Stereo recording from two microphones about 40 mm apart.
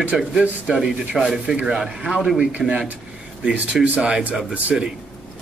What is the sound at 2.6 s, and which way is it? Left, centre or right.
Speech, centre.